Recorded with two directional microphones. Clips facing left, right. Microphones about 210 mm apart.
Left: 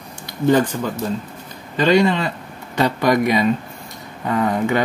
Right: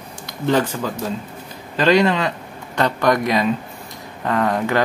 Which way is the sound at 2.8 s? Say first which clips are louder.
Left 1 dB; 5° left (ahead or behind).